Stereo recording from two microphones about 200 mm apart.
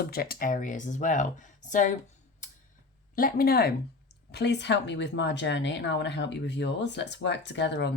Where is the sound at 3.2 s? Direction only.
45° left (ahead or behind).